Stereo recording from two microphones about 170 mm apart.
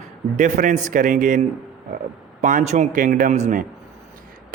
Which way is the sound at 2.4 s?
45° right (ahead or behind).